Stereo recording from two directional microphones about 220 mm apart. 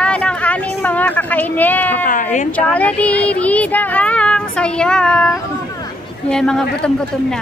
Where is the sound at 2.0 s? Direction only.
35° left (ahead or behind).